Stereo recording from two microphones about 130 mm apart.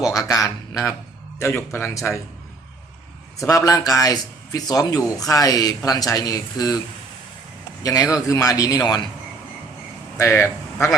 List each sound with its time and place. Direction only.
0.0 s speech: 25° left (ahead or behind)
3.4 s speech: 25° left (ahead or behind)
7.9 s speech: 25° left (ahead or behind)
10.2 s speech: 20° left (ahead or behind)